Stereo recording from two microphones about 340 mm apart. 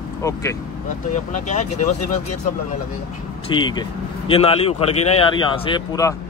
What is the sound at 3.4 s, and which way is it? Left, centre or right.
A man's voice, centre.